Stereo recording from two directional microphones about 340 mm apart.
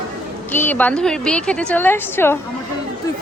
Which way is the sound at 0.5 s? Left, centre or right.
Centre.